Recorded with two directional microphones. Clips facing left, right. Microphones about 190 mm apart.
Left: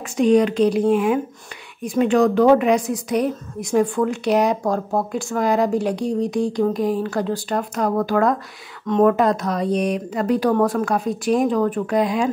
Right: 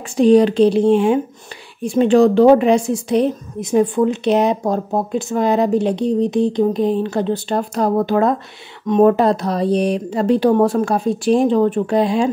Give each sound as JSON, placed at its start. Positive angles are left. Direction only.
{"t": 0.2, "sound": "a woman's voice", "side_deg": -30}
{"t": 9.1, "sound": "a woman's voice", "side_deg": -30}